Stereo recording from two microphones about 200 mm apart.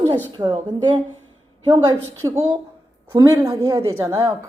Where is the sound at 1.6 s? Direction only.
25° right (ahead or behind).